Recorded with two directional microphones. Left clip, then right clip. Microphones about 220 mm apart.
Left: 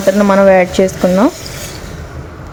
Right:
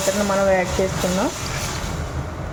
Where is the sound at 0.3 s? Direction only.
50° left (ahead or behind).